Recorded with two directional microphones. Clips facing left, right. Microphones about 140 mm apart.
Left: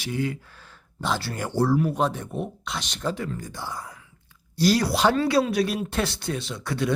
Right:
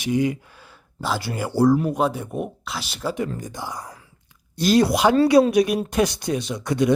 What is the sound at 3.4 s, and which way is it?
Speech, 15° right (ahead or behind).